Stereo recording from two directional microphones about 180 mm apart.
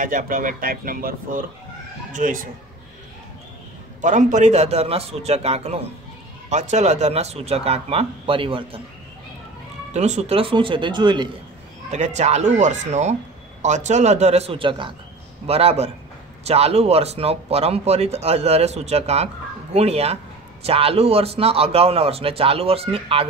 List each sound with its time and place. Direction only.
0.0 s speech: 50° right (ahead or behind)
4.0 s speech: 45° right (ahead or behind)
9.9 s speech: 40° right (ahead or behind)
11.9 s speech: 40° right (ahead or behind)